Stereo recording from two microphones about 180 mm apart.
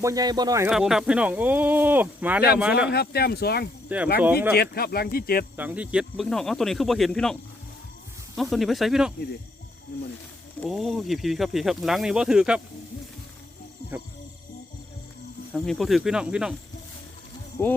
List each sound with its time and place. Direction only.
0.0 s speech: 20° right (ahead or behind)
0.7 s speech: 5° right (ahead or behind)
2.9 s speech: 60° left (ahead or behind)
3.8 s speech: 10° right (ahead or behind)
4.5 s speech: 60° left (ahead or behind)
5.5 s speech: 10° right (ahead or behind)
8.4 s speech: centre (ahead or behind)
10.7 s speech: centre (ahead or behind)
15.5 s speech: centre (ahead or behind)
17.6 s speech: 10° left (ahead or behind)